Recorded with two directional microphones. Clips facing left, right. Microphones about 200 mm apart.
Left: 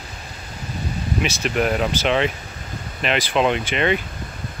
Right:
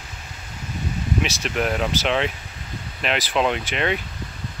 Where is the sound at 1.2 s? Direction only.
Centre (ahead or behind).